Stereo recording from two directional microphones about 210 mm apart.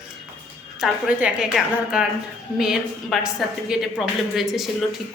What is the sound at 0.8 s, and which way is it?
A woman's voice, 5° right (ahead or behind).